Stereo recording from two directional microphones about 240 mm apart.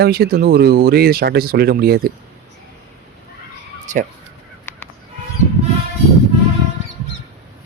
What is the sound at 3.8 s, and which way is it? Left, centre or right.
Speech, right.